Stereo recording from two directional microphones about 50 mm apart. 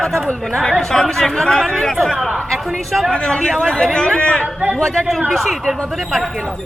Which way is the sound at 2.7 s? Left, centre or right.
Centre.